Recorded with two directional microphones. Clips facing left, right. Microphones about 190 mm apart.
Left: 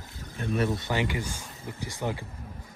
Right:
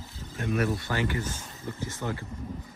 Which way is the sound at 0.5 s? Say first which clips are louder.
Left 1 dB; 20° left (ahead or behind).